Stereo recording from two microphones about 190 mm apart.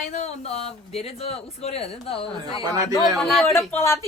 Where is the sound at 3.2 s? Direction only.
Centre (ahead or behind).